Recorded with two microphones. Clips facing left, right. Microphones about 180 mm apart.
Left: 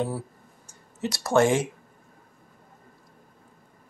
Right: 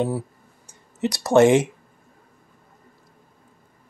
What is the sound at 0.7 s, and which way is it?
Speech, 20° right (ahead or behind).